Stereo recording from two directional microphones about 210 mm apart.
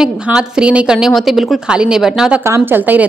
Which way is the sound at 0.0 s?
5° right (ahead or behind).